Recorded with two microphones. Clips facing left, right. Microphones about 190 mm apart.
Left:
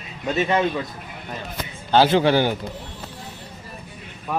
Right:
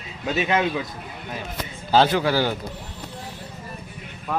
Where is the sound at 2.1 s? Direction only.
25° left (ahead or behind).